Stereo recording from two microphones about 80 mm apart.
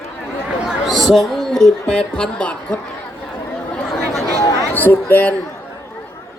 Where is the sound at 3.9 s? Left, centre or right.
Centre.